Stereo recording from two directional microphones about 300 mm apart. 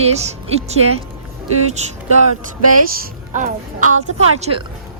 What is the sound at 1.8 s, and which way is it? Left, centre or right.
A woman's voice, right.